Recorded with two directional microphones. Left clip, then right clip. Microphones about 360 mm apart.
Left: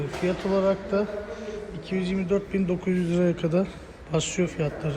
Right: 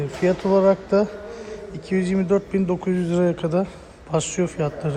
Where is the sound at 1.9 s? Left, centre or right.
Right.